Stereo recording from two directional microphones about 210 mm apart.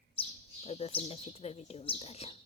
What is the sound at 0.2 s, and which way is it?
Speech, 30° left (ahead or behind).